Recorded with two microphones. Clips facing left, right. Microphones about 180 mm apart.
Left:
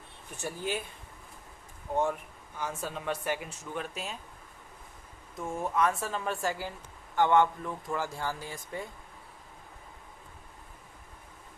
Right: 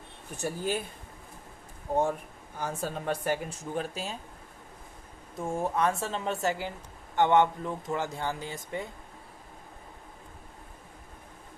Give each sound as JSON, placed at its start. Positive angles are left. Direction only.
{"t": 0.4, "sound": "speech", "side_deg": -40}
{"t": 2.6, "sound": "speech", "side_deg": -35}
{"t": 5.4, "sound": "speech", "side_deg": -30}